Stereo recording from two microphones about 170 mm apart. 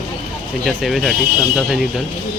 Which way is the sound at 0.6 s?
Centre (ahead or behind).